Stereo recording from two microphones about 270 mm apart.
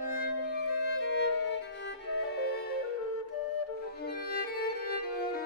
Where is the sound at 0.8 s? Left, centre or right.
Left.